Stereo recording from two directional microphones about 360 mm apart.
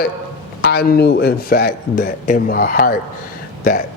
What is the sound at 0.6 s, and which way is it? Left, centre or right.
Speech, left.